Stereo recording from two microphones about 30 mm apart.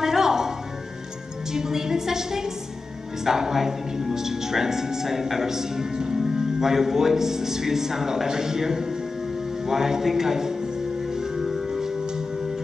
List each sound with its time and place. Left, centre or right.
0.0 s music: centre
1.5 s a woman's voice: centre
11.4 s music: centre